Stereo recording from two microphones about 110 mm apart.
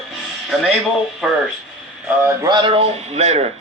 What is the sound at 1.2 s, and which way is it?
Speech, 5° right (ahead or behind).